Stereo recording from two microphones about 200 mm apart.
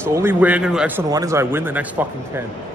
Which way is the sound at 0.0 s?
10° right (ahead or behind).